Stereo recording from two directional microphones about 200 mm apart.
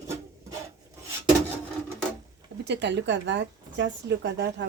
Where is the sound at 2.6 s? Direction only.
60° right (ahead or behind).